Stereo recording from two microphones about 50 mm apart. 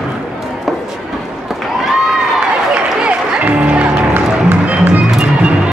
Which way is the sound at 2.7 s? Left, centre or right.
Right.